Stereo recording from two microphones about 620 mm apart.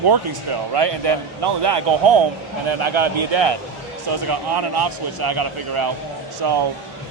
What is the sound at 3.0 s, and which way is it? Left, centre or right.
Speech, right.